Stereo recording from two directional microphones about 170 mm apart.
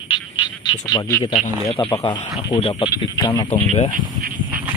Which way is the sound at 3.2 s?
20° left (ahead or behind).